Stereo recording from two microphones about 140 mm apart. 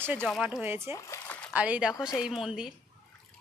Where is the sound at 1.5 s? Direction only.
10° right (ahead or behind).